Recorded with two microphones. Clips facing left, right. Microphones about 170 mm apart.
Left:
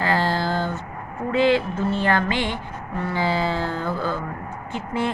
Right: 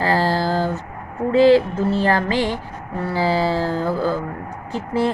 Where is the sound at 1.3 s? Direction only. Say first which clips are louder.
Right 6 dB; 35° right (ahead or behind).